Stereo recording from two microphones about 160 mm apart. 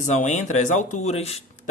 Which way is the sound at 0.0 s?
50° left (ahead or behind).